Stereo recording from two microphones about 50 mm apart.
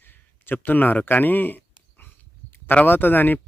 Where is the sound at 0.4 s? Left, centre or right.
Left.